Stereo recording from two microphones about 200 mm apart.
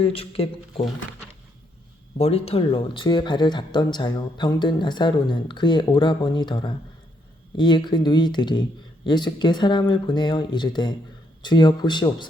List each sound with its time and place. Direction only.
0.0 s speech: 30° left (ahead or behind)
2.1 s speech: 30° left (ahead or behind)